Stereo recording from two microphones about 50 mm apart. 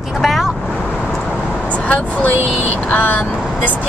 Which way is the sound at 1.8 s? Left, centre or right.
Left.